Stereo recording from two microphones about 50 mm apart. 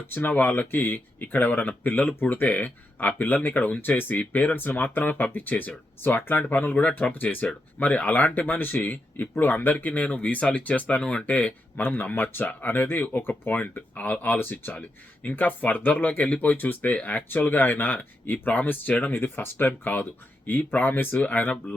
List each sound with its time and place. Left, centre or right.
0.1 s speech: left
11.9 s speech: left
14.3 s speech: left